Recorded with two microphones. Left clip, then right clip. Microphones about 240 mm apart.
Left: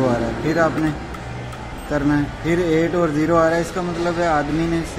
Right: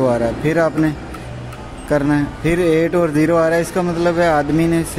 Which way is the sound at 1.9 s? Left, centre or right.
Right.